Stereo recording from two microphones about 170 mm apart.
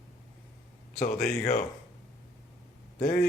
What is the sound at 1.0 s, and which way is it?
Speech, 60° left (ahead or behind).